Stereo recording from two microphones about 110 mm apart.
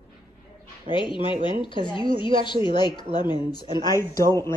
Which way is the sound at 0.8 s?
45° left (ahead or behind).